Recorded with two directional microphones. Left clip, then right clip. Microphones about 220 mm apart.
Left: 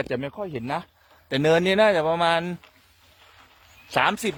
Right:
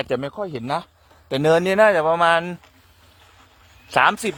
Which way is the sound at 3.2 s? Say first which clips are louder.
Left 2 dB; 50° right (ahead or behind).